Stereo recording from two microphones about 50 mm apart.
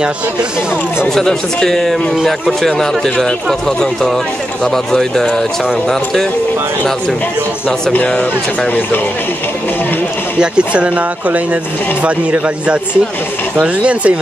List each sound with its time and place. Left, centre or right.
1.0 s speech: centre
7.9 s speech: left
10.7 s speech: right